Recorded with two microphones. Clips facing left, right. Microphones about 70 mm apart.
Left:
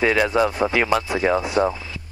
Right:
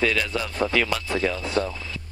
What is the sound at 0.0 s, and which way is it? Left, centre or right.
Speech, left.